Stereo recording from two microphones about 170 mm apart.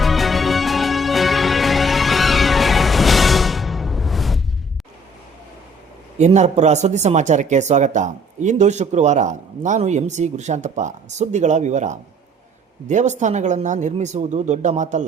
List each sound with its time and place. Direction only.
0.0 s music: centre (ahead or behind)
6.1 s speech: 40° right (ahead or behind)